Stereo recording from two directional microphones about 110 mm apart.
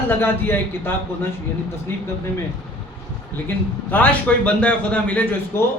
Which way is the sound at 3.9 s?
10° left (ahead or behind).